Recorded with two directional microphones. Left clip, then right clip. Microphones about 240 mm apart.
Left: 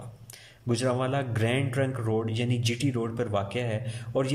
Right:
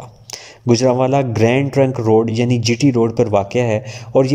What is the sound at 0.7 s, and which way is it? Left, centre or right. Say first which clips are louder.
A man's voice: right 14 dB; right.